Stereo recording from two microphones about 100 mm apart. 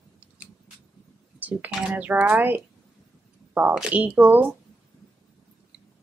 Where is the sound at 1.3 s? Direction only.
15° right (ahead or behind).